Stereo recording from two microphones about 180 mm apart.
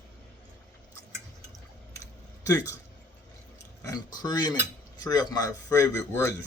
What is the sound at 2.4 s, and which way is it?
Speech, 20° left (ahead or behind).